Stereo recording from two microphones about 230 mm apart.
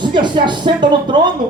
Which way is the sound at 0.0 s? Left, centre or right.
Centre.